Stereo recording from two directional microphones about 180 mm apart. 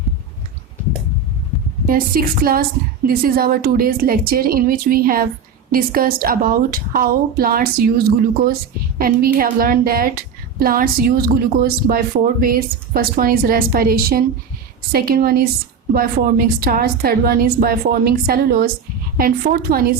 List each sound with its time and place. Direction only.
1.9 s a woman's voice: 55° right (ahead or behind)